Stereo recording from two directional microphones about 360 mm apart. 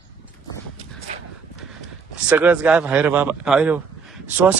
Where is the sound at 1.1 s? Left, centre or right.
Centre.